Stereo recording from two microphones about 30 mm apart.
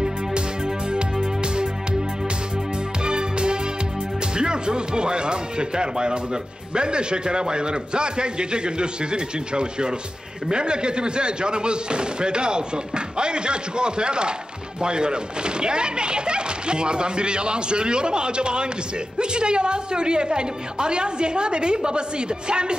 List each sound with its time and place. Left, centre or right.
0.9 s music: right
3.1 s music: right
4.4 s speech: right